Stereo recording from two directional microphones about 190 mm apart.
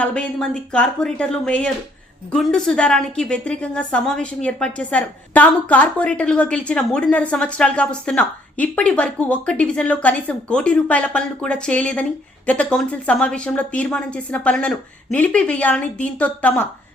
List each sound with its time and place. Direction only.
0.0 s a woman's voice: 5° left (ahead or behind)